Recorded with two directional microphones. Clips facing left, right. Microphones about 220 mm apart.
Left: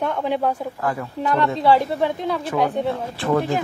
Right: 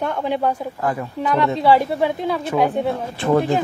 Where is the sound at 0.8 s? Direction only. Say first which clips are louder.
Right 2 dB; 20° right (ahead or behind).